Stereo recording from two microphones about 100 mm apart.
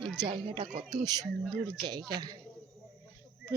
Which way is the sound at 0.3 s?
55° right (ahead or behind).